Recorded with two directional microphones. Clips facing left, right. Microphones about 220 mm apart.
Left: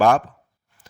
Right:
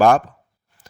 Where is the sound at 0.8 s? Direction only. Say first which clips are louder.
Right 2 dB; 40° right (ahead or behind).